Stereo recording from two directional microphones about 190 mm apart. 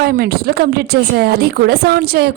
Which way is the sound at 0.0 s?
55° right (ahead or behind).